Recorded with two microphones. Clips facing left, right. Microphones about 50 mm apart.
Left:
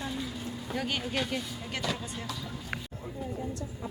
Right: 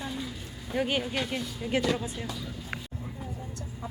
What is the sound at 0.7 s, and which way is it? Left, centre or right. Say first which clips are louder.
Speech: right 6 dB; centre.